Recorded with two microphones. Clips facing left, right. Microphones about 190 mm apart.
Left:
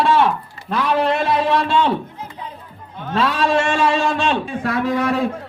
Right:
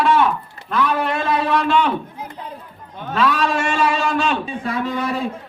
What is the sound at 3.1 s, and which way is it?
A man's voice, 30° left (ahead or behind).